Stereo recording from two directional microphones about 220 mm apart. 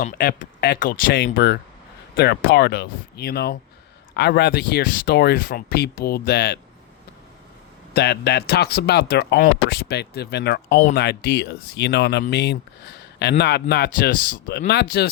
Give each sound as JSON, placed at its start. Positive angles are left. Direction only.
{"t": 0.0, "sound": "speech", "side_deg": 40}
{"t": 7.9, "sound": "speech", "side_deg": 50}